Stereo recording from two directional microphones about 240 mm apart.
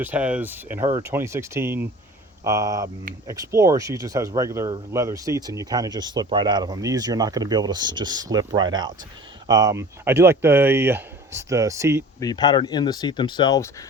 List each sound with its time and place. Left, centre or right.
0.0 s speech: centre
12.2 s speech: centre